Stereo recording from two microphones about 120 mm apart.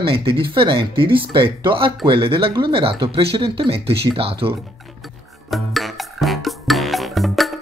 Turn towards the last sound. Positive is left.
turn(degrees=0)  # may be behind; listen again after turning